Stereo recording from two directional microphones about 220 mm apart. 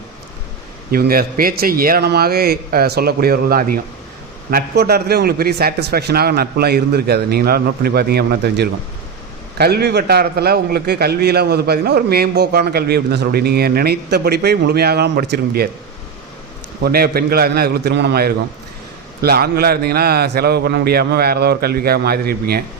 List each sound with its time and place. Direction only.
0.9 s a man's voice: 40° right (ahead or behind)
16.8 s a man's voice: 45° right (ahead or behind)